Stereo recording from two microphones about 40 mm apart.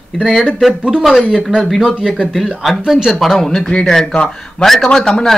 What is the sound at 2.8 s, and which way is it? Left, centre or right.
Speech, centre.